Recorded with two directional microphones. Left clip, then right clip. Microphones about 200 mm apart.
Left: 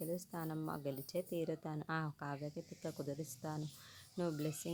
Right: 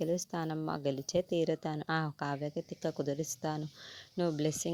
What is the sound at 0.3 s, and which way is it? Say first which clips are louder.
Speech: right 8 dB; 35° right (ahead or behind).